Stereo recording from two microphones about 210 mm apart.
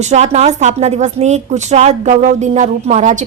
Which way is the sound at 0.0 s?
35° right (ahead or behind).